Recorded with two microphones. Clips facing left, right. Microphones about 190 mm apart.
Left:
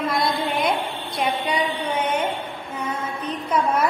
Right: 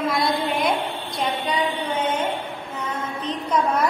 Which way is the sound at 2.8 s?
10° left (ahead or behind).